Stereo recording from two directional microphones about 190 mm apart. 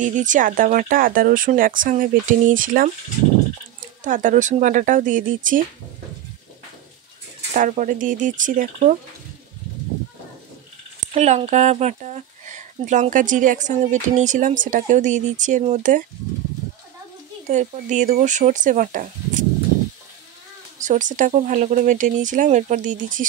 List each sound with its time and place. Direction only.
0.0 s speech: 40° right (ahead or behind)
4.0 s speech: 40° right (ahead or behind)
7.5 s speech: 45° right (ahead or behind)
11.1 s speech: 35° right (ahead or behind)
17.5 s speech: 40° right (ahead or behind)
20.8 s speech: 40° right (ahead or behind)